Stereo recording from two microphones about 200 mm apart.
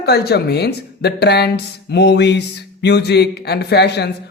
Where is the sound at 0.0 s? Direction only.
55° left (ahead or behind).